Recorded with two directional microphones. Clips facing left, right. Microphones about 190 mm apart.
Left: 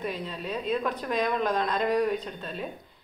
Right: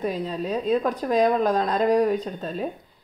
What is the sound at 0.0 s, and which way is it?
Speech, 40° right (ahead or behind).